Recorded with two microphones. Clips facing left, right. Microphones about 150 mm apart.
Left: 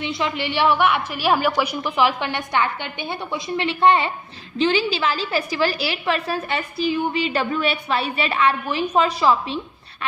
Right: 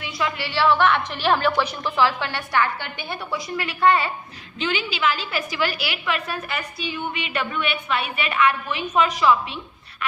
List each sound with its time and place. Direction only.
0.0 s a woman's voice: 25° left (ahead or behind)
4.5 s a woman's voice: 35° left (ahead or behind)